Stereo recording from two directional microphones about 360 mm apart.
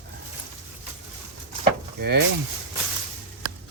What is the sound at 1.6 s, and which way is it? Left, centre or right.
Vehicle, right.